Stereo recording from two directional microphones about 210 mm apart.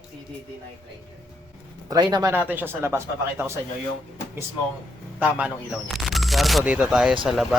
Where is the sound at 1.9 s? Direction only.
20° right (ahead or behind).